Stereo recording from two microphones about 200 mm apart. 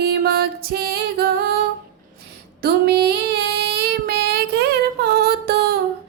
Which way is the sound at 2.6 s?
50° right (ahead or behind).